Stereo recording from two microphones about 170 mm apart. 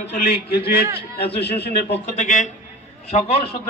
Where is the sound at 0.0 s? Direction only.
70° left (ahead or behind).